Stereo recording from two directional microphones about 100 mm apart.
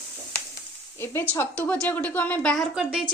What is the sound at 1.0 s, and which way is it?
Speech, 25° left (ahead or behind).